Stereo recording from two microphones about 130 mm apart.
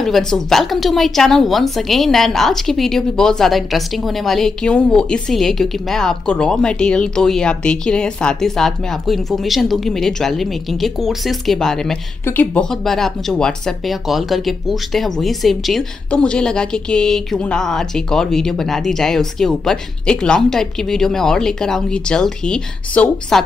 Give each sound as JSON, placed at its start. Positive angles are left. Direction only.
{"t": 0.3, "sound": "a woman's voice", "side_deg": 0}
{"t": 12.3, "sound": "speech", "side_deg": 15}
{"t": 12.6, "sound": "a woman's voice", "side_deg": 5}